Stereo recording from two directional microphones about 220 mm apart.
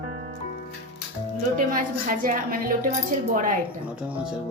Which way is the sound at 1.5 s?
40° right (ahead or behind).